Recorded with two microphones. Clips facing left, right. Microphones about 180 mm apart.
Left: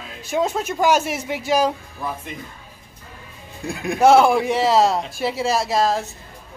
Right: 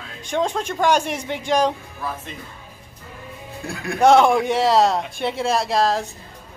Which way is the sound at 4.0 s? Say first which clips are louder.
Even; 5° left (ahead or behind).